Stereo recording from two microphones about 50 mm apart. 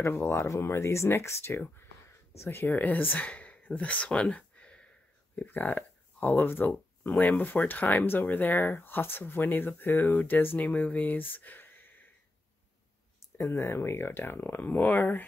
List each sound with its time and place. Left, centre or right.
0.0 s speech: left
2.7 s speech: left
5.3 s speech: left
13.4 s speech: left